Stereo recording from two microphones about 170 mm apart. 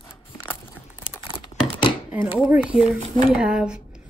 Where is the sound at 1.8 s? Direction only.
30° left (ahead or behind).